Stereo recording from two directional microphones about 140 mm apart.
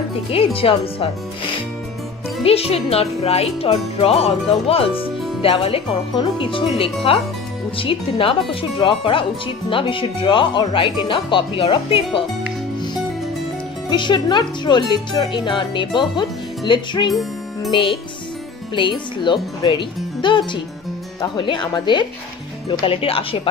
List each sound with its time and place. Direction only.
0.3 s speech: 40° left (ahead or behind)
13.8 s speech: 35° left (ahead or behind)